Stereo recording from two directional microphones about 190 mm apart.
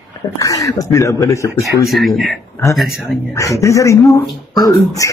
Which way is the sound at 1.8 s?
Centre (ahead or behind).